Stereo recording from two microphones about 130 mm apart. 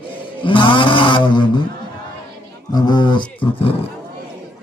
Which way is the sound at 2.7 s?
30° left (ahead or behind).